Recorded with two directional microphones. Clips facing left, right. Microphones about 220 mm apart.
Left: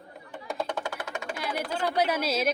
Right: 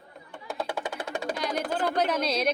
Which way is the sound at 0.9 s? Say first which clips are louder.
Right 3 dB; 35° right (ahead or behind).